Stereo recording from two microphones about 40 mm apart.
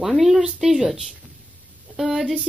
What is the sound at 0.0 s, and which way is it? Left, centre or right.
A woman's voice, centre.